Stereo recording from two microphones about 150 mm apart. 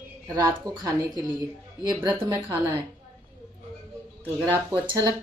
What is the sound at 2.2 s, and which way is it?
Speech, 30° right (ahead or behind).